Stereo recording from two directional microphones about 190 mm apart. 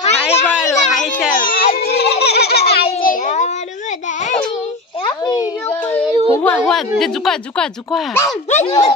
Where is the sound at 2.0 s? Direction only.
60° left (ahead or behind).